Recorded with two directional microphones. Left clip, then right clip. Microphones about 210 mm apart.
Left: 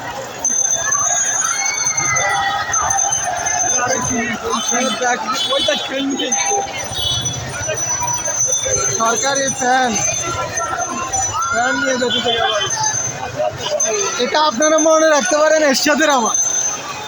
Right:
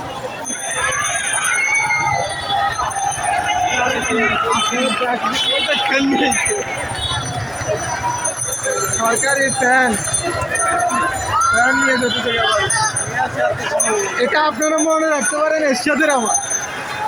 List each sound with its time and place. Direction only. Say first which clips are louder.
9.0 s jingle bell: right 2 dB; 5° left (ahead or behind)
14.2 s speech: left 2 dB; 15° left (ahead or behind)